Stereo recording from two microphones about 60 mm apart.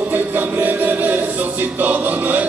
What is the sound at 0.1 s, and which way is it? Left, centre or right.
Music, right.